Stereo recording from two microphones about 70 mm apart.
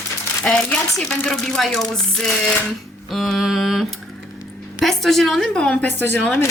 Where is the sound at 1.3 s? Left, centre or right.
Centre.